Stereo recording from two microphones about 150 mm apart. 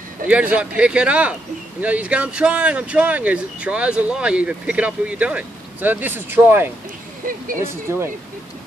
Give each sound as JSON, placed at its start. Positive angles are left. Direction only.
{"t": 0.3, "sound": "speech", "side_deg": -10}
{"t": 7.2, "sound": "speech", "side_deg": -65}
{"t": 7.6, "sound": "speech", "side_deg": -15}